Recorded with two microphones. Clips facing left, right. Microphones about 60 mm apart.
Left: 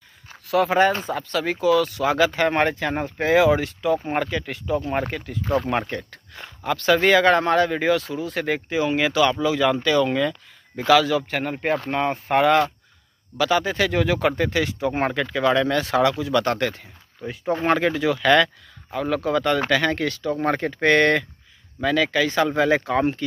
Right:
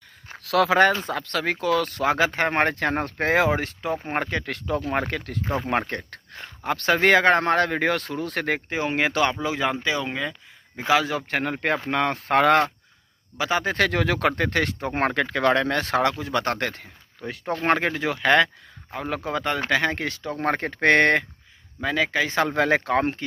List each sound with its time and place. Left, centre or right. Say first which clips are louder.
0.4 s speech: even; right
2.1 s speech: left 5 dB; right
2.7 s speech: even; right
5.7 s speech: even; right
8.5 s speech: left 3 dB; right
11.2 s speech: left 1 dB; right
13.4 s speech: left 3 dB; right
13.7 s speech: left 1 dB; right
17.6 s speech: left 2 dB; right
22.6 s speech: even; right